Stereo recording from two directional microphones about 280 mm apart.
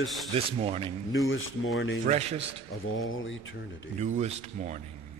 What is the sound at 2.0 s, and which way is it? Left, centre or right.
Speech, right.